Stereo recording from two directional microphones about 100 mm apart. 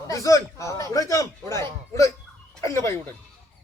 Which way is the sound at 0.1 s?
35° left (ahead or behind).